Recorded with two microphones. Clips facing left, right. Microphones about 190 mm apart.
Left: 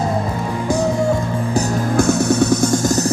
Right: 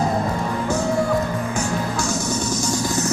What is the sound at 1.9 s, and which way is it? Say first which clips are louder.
Music: left 9 dB; 60° left (ahead or behind).